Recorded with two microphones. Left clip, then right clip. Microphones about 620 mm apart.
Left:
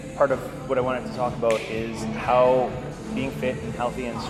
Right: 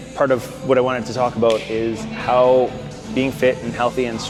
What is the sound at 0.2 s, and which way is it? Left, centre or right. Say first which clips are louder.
Speech: right 4 dB; right.